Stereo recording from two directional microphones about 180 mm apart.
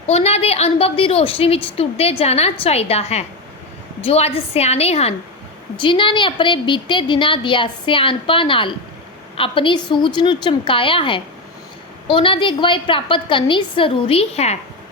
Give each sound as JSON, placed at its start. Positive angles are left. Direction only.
{"t": 0.1, "sound": "a woman's voice", "side_deg": 35}